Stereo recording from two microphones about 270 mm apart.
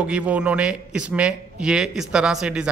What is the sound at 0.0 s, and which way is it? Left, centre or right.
Speech, centre.